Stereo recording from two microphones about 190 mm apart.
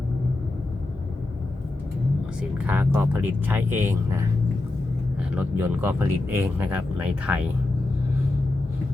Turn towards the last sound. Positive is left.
turn(degrees=-5)  # may be behind; listen again after turning